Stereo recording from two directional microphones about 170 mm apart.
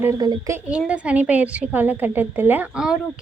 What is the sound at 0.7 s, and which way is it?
A woman's voice, 5° right (ahead or behind).